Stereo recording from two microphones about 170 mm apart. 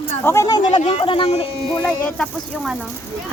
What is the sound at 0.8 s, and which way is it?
Speech, 40° left (ahead or behind).